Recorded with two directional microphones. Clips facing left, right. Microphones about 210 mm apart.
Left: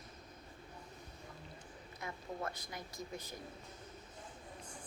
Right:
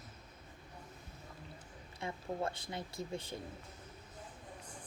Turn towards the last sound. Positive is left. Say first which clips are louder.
# right 4 dB
turn(degrees=-30)  # may be behind; listen again after turning